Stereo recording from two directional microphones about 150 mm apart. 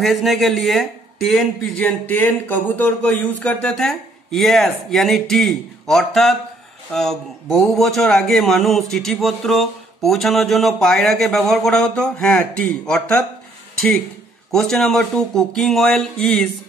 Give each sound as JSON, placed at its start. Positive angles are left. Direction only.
{"t": 0.0, "sound": "speech", "side_deg": 0}
{"t": 14.5, "sound": "speech", "side_deg": 5}